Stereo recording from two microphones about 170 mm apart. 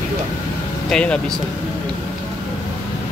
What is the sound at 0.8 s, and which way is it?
Speech, 5° left (ahead or behind).